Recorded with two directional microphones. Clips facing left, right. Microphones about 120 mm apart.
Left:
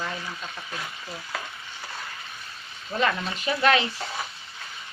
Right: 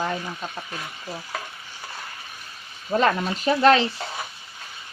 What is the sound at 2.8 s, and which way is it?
Speech, 40° right (ahead or behind).